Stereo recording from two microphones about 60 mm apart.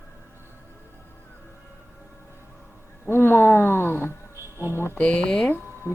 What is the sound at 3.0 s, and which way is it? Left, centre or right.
Speech, left.